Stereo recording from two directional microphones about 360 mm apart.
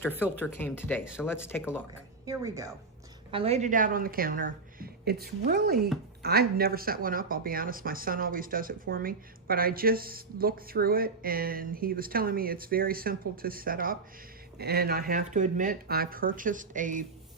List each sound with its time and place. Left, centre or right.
0.0 s speech: centre
2.2 s speech: centre